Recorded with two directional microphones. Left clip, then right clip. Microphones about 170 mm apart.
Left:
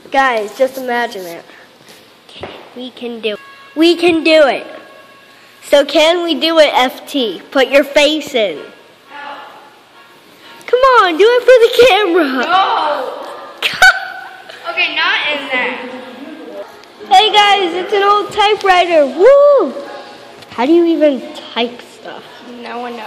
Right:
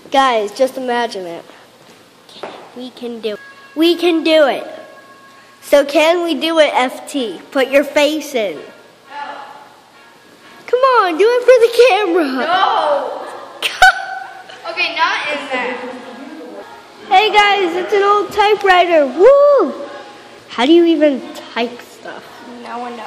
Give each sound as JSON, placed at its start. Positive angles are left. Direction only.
{"t": 0.1, "sound": "a woman's voice", "side_deg": -20}
{"t": 2.8, "sound": "a woman's voice", "side_deg": -5}
{"t": 5.7, "sound": "a woman's voice", "side_deg": -5}
{"t": 10.6, "sound": "speech", "side_deg": 0}
{"t": 13.6, "sound": "a sound", "side_deg": 0}
{"t": 15.0, "sound": "a sound", "side_deg": -30}
{"t": 17.1, "sound": "a woman's voice", "side_deg": 5}
{"t": 19.4, "sound": "a woman's voice", "side_deg": -25}
{"t": 21.1, "sound": "a woman's voice", "side_deg": 5}
{"t": 22.6, "sound": "a woman's voice", "side_deg": 25}